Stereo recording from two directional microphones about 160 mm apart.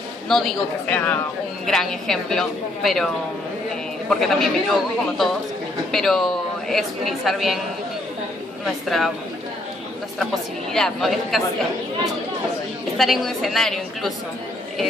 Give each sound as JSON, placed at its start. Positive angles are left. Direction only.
{"t": 0.3, "sound": "speech", "side_deg": 0}
{"t": 4.1, "sound": "speech", "side_deg": 0}
{"t": 8.6, "sound": "speech", "side_deg": 0}
{"t": 10.7, "sound": "speech", "side_deg": 0}
{"t": 12.9, "sound": "speech", "side_deg": 0}